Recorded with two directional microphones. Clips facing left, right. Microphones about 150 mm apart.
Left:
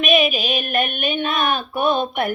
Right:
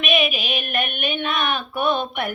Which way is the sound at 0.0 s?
40° left (ahead or behind).